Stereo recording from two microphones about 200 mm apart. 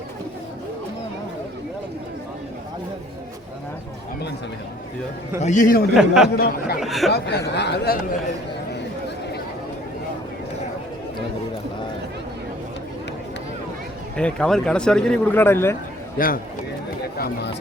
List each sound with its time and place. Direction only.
5.4 s a man's voice: 40° left (ahead or behind)
6.0 s speech: 5° right (ahead or behind)
6.3 s speech: 50° left (ahead or behind)
6.7 s speech: centre (ahead or behind)
7.1 s speech: 55° left (ahead or behind)
14.2 s speech: 5° left (ahead or behind)
16.1 s speech: 45° left (ahead or behind)